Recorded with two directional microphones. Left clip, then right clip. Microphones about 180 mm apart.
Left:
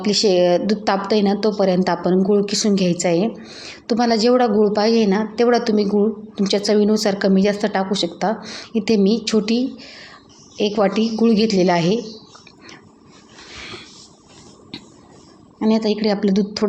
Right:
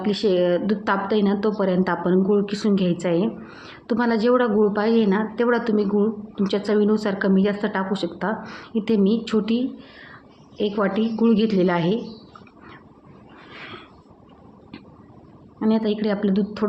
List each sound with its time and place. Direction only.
0.0 s a woman's voice: 15° left (ahead or behind)
15.6 s a woman's voice: 15° left (ahead or behind)